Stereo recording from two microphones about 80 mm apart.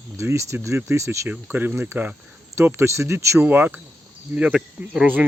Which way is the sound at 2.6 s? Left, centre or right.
Right.